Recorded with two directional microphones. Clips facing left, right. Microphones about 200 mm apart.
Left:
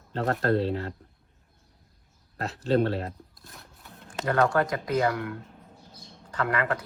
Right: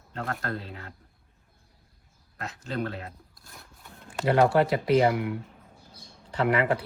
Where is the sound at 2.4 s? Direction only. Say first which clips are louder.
Left 8 dB; 35° left (ahead or behind).